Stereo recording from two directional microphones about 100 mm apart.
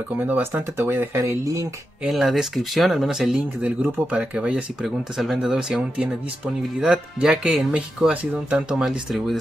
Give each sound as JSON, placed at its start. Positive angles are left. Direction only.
{"t": 0.3, "sound": "speech", "side_deg": -25}
{"t": 1.2, "sound": "speech", "side_deg": -35}
{"t": 2.0, "sound": "speech", "side_deg": 0}
{"t": 4.8, "sound": "speech", "side_deg": 0}